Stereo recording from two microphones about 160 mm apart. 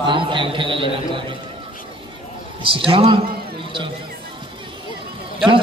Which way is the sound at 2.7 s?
35° right (ahead or behind).